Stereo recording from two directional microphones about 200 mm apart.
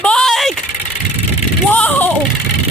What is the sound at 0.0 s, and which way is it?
Vehicle, 5° left (ahead or behind).